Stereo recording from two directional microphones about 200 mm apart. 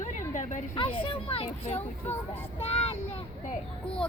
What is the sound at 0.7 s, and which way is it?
Speech, 25° left (ahead or behind).